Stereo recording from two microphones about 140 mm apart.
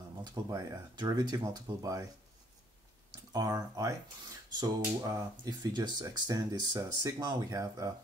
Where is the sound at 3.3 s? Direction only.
25° right (ahead or behind).